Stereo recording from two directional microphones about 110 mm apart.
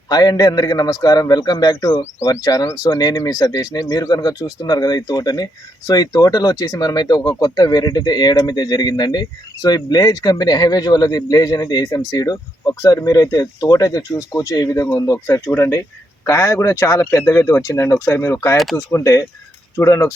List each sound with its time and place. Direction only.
0.1 s speech: 35° left (ahead or behind)
18.5 s speech: centre (ahead or behind)
18.9 s speech: 25° left (ahead or behind)